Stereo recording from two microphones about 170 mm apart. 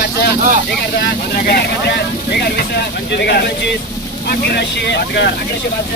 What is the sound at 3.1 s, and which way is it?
Speech, 80° left.